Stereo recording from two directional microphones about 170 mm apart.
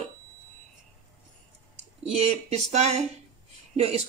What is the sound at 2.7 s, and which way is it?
Speech, 40° right (ahead or behind).